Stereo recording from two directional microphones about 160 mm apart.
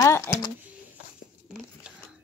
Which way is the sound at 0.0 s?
15° left (ahead or behind).